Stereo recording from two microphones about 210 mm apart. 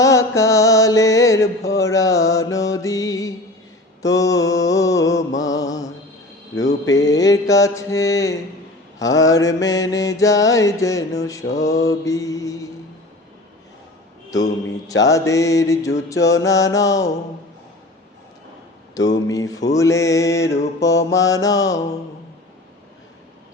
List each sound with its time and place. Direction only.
0.0 s music: 15° left (ahead or behind)
4.0 s mantra: 15° left (ahead or behind)
15.0 s mantra: 15° left (ahead or behind)
18.9 s mantra: 15° left (ahead or behind)